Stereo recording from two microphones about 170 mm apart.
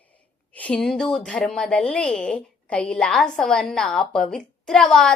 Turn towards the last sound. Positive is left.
turn(degrees=5)  # may be behind; listen again after turning